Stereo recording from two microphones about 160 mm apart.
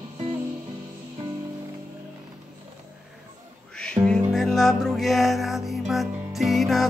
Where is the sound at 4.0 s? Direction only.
20° right (ahead or behind).